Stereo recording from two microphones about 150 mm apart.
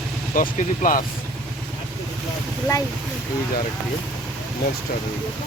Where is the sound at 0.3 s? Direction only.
65° left (ahead or behind).